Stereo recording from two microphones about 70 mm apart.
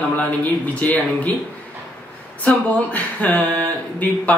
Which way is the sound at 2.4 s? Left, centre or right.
Left.